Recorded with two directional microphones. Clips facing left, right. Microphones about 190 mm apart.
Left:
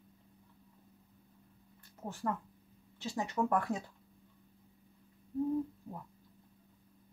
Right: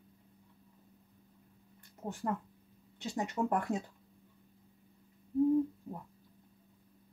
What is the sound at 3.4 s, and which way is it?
Speech, 15° right (ahead or behind).